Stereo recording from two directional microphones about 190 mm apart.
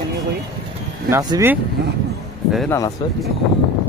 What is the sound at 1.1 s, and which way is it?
Speech, 15° right (ahead or behind).